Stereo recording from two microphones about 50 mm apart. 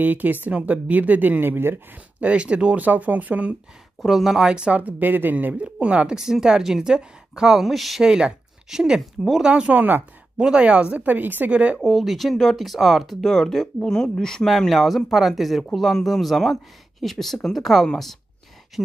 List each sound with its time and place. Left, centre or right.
0.0 s speech: right
2.1 s speech: right
4.0 s speech: centre
4.5 s speech: centre
4.7 s speech: right
5.5 s speech: right
6.1 s a woman's voice: centre
8.0 s speech: centre; by 11.5 s right
11.5 s speech: right
11.8 s speech: centre
13.2 s speech: centre
14.7 s speech: centre